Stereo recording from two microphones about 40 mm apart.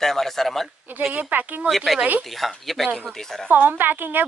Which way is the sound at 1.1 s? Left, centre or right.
Right.